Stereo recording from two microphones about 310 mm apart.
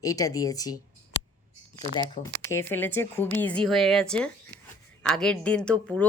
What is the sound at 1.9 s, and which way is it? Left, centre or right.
Speech, centre.